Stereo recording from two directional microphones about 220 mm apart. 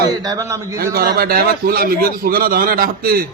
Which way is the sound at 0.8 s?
40° right (ahead or behind).